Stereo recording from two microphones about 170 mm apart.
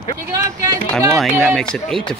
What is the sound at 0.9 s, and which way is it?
Speech, centre (ahead or behind).